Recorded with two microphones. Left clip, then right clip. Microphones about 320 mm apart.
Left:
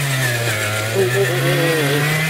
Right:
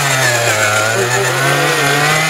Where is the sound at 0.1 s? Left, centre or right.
Centre.